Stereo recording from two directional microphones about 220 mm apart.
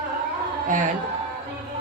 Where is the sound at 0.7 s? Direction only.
35° right (ahead or behind).